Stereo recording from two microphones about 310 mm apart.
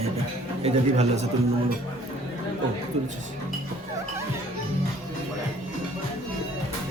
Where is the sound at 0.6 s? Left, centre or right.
Right.